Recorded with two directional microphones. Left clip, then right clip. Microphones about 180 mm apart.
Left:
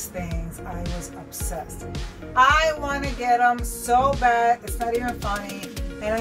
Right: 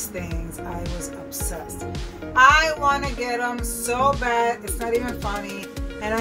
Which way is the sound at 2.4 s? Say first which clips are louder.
Right 2 dB; 15° right (ahead or behind).